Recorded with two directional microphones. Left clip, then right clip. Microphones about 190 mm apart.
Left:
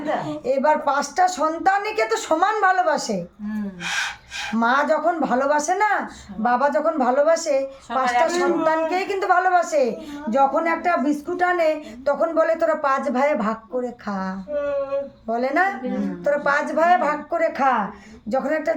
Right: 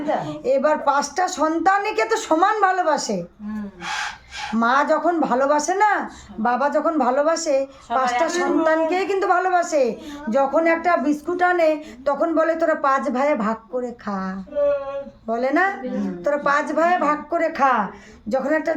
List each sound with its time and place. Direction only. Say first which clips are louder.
0.2 s a woman's voice: right 2 dB; 15° right (ahead or behind)
4.5 s a woman's voice: right 1 dB; 15° right (ahead or behind)